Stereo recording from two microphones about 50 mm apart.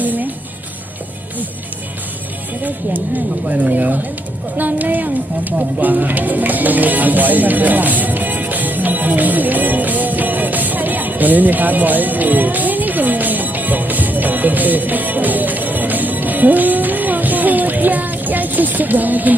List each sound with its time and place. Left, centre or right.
0.0 s music: right
3.4 s speech: right
4.5 s music: right